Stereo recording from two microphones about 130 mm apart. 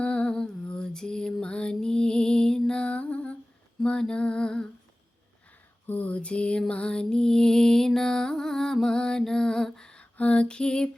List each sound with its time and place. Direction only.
0.0 s lullaby: 10° left (ahead or behind)
5.8 s music: 10° left (ahead or behind)